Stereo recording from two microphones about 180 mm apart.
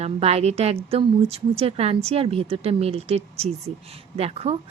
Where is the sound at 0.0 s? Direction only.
35° right (ahead or behind).